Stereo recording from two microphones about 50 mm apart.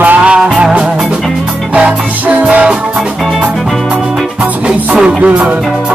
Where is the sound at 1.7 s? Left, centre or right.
Right.